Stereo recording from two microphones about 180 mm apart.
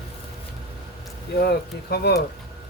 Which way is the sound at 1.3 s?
60° left (ahead or behind).